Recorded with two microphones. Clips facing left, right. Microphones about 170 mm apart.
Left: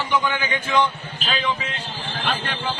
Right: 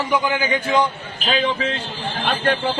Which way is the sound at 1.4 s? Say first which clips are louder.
Right 5 dB; 30° right (ahead or behind).